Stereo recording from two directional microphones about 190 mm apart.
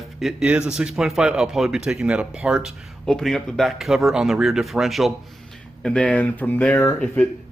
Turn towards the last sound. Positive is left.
turn(degrees=10)  # may be behind; listen again after turning